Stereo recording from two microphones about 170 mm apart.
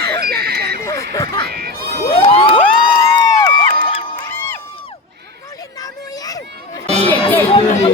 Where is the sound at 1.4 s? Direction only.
65° right (ahead or behind).